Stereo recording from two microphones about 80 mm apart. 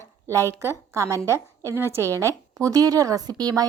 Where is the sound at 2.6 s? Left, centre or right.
Right.